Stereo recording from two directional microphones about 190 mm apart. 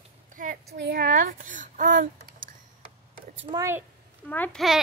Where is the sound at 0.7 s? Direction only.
55° right (ahead or behind).